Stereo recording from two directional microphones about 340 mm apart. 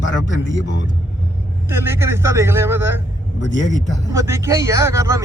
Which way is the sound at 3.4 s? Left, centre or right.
Left.